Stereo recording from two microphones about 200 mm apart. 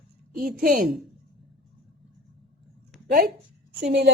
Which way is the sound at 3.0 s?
45° right (ahead or behind).